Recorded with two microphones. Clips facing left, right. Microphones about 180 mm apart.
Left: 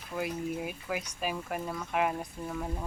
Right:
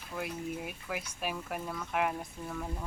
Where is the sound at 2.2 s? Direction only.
15° left (ahead or behind).